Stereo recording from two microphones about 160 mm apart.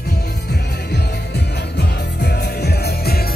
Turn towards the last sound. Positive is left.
turn(degrees=75)  # may be behind; listen again after turning